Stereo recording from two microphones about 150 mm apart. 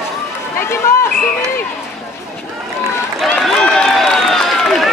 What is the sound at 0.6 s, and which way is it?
Run, 15° left (ahead or behind).